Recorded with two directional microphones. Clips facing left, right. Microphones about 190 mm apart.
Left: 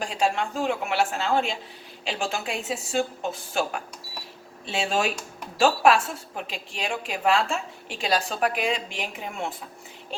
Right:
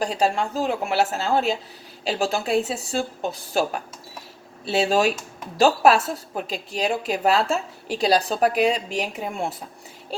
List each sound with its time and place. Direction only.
0.0 s a woman's voice: 40° right (ahead or behind)